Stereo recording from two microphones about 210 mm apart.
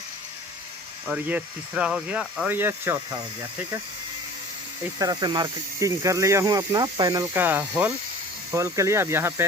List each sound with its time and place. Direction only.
1.0 s speech: 5° right (ahead or behind)
4.9 s speech: 20° right (ahead or behind)